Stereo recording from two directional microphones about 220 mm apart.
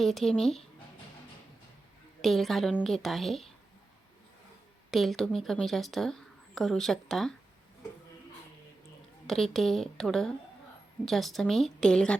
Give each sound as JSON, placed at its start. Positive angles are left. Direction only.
{"t": 0.0, "sound": "a woman's voice", "side_deg": 0}
{"t": 2.2, "sound": "a woman's voice", "side_deg": 0}
{"t": 4.9, "sound": "a woman's voice", "side_deg": 0}
{"t": 9.2, "sound": "a woman's voice", "side_deg": 0}